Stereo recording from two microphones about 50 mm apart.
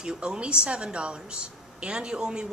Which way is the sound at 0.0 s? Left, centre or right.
Centre.